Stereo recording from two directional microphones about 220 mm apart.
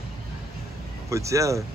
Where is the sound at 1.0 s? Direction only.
15° right (ahead or behind).